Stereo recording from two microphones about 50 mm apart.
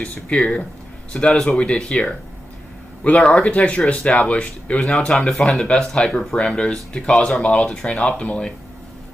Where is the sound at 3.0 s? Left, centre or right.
Left.